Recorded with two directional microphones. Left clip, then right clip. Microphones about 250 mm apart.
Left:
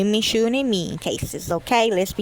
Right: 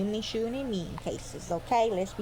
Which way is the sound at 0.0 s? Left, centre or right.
Left.